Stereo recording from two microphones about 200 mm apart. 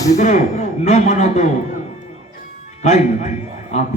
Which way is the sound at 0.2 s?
35° left (ahead or behind).